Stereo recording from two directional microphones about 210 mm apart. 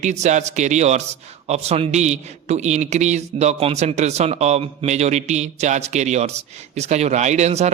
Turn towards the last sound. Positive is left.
turn(degrees=-30)  # may be behind; listen again after turning